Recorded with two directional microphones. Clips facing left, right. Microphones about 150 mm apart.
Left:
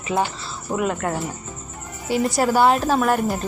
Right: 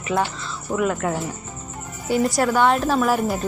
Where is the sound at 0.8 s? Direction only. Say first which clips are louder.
Right 1 dB; centre (ahead or behind).